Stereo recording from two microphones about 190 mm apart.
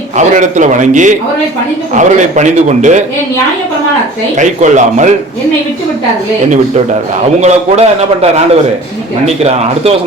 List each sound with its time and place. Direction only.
0.2 s a man's voice: 40° right (ahead or behind)
4.4 s a man's voice: 40° right (ahead or behind)
7.4 s a man's voice: 35° right (ahead or behind)